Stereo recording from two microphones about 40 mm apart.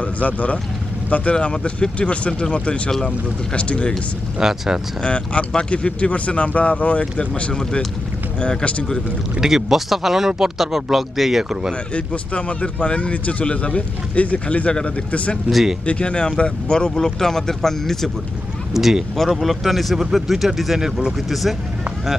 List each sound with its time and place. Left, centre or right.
0.0 s speech: left
1.3 s speech: left
4.4 s speech: centre
5.0 s speech: left
9.4 s speech: centre
11.9 s speech: left
15.5 s speech: right
15.8 s speech: left; by 18.1 s centre
18.7 s speech: centre